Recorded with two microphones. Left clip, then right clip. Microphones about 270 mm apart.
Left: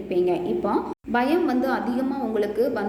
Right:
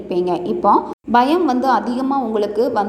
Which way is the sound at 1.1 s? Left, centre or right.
Right.